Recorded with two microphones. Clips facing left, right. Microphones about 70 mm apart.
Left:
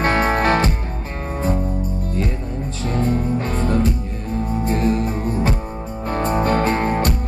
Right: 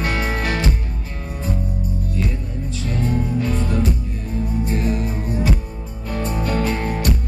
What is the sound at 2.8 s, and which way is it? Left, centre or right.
Music, left.